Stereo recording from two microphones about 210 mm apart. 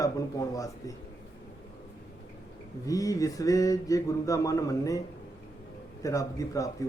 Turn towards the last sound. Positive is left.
turn(degrees=15)  # may be behind; listen again after turning